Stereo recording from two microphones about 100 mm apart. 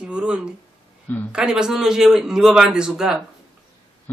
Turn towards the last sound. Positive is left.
turn(degrees=-5)  # may be behind; listen again after turning